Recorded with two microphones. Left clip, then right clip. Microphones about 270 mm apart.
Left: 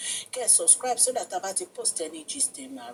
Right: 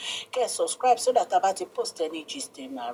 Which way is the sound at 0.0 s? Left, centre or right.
Centre.